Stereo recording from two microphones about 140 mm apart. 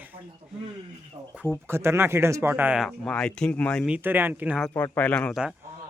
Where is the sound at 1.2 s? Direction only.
25° right (ahead or behind).